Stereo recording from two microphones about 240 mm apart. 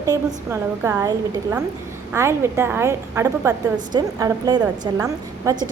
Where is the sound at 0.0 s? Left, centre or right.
Centre.